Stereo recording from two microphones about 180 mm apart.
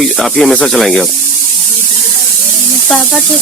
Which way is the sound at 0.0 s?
Centre (ahead or behind).